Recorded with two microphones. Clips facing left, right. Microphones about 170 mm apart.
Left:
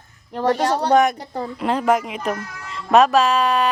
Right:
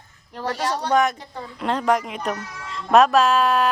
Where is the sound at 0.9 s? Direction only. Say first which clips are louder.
Left 3 dB; 15° left (ahead or behind).